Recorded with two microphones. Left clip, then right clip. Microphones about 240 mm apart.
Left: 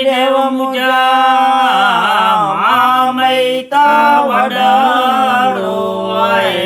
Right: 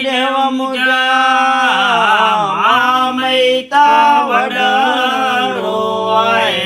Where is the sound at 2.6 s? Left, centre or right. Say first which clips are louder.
Even; centre.